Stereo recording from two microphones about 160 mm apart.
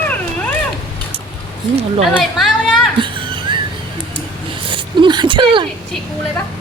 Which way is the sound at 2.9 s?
30° right (ahead or behind).